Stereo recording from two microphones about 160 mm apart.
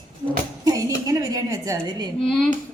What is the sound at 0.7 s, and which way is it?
A woman's voice, 20° right (ahead or behind).